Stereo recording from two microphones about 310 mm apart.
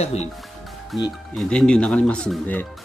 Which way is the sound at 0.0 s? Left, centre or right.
Left.